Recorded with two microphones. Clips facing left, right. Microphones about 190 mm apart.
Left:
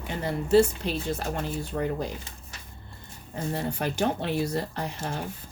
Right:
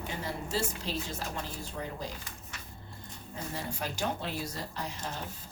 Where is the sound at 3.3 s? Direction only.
60° left (ahead or behind).